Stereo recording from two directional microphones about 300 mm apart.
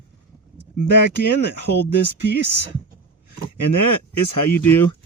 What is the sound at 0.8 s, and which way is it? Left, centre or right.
Speech, left.